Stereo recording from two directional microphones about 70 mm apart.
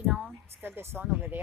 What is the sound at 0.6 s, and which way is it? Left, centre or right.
Speech, right.